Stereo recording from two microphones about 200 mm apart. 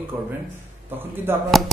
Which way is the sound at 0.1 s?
15° right (ahead or behind).